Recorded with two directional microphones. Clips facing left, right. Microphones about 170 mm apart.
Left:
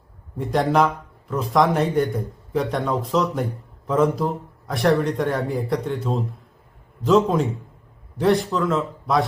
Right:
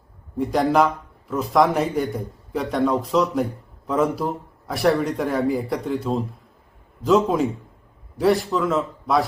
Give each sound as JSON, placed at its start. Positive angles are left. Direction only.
{"t": 0.3, "sound": "a man's voice", "side_deg": 0}